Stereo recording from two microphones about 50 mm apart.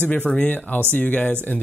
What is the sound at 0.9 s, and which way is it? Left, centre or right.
Speech, left.